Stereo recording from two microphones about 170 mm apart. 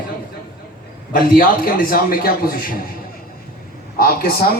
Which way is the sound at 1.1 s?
55° left (ahead or behind).